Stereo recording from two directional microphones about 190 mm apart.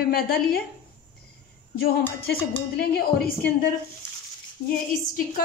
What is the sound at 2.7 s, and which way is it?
Speech, 55° left (ahead or behind).